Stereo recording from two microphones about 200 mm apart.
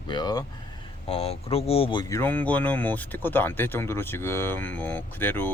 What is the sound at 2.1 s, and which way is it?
Speech, 10° left (ahead or behind).